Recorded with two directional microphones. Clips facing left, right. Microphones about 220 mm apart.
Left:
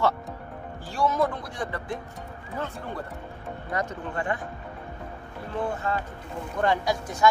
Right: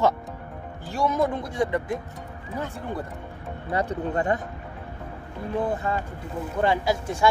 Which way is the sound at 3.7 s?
35° right (ahead or behind).